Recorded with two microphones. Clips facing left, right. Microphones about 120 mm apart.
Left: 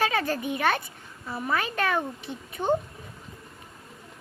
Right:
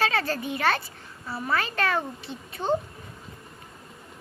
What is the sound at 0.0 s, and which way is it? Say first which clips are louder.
Speech: even; 15° left (ahead or behind).